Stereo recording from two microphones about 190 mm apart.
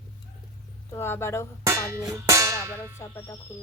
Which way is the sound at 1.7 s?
15° right (ahead or behind).